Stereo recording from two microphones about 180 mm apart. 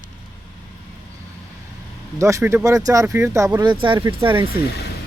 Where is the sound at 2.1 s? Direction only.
15° right (ahead or behind).